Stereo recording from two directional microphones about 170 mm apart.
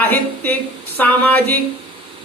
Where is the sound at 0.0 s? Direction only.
10° left (ahead or behind).